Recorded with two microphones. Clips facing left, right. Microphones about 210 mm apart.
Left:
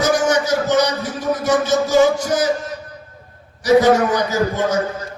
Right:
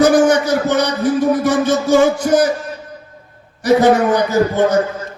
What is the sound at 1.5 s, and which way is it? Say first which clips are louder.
Music: right 3 dB; 55° right (ahead or behind).